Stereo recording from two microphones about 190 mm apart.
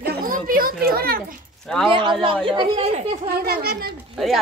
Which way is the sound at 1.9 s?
25° right (ahead or behind).